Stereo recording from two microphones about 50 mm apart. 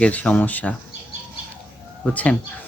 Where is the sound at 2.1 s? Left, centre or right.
Left.